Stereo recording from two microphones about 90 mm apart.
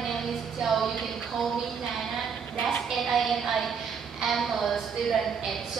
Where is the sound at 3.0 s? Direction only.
Centre (ahead or behind).